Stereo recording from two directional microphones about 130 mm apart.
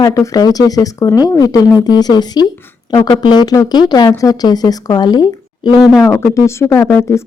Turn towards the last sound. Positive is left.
turn(degrees=15)  # may be behind; listen again after turning